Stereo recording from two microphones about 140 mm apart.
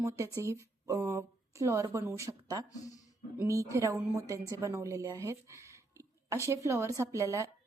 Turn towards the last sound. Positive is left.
turn(degrees=-20)  # may be behind; listen again after turning